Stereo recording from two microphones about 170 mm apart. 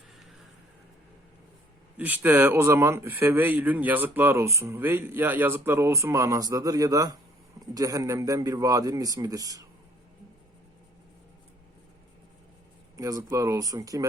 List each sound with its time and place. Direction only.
2.0 s a man's voice: 10° right (ahead or behind)
13.0 s a man's voice: 20° right (ahead or behind)